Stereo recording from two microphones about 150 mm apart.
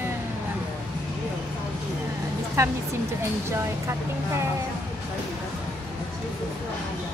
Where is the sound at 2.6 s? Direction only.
20° right (ahead or behind).